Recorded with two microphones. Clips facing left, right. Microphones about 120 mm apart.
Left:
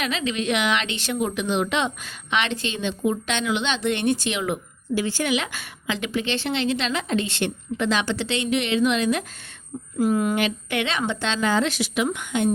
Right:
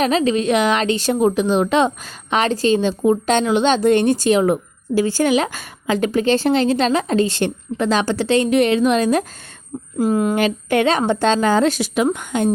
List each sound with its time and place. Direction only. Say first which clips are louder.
0.0 s a woman's voice: right 9 dB; 40° right (ahead or behind)